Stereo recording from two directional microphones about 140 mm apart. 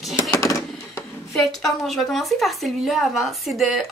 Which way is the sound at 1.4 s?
Centre (ahead or behind).